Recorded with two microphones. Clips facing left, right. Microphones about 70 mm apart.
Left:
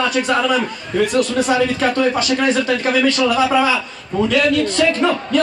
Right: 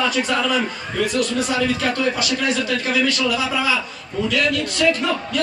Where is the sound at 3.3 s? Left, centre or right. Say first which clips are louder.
Left 7 dB; left.